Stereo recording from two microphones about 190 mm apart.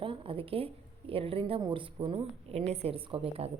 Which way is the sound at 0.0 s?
25° right (ahead or behind).